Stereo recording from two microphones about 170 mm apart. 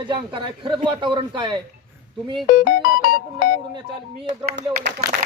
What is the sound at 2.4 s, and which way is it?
Music, 55° left (ahead or behind).